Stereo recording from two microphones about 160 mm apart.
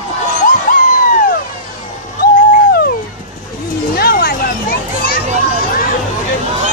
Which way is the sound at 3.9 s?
70° left (ahead or behind).